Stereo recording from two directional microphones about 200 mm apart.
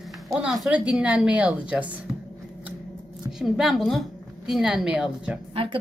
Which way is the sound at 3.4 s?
Centre (ahead or behind).